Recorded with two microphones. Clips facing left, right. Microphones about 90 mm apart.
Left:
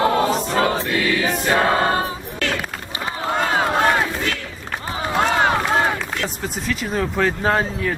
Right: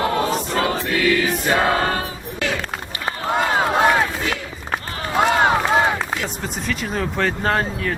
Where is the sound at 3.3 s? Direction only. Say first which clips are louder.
Right 1 dB; 5° right (ahead or behind).